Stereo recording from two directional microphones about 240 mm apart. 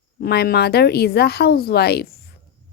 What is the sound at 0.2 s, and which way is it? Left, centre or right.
A woman's voice, left.